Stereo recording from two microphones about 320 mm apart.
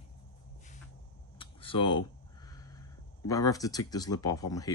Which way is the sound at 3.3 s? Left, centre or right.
Centre.